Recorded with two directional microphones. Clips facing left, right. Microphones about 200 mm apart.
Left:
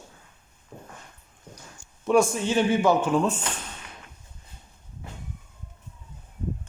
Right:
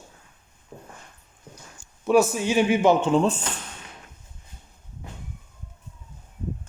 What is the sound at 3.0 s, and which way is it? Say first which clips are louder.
Speech: right 3 dB; 25° right (ahead or behind).